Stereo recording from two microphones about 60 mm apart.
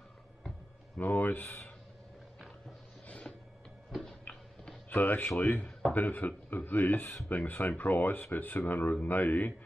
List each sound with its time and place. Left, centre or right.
0.9 s speech: left
3.1 s a sound: left
3.9 s tick-tock: centre
4.8 s speech: left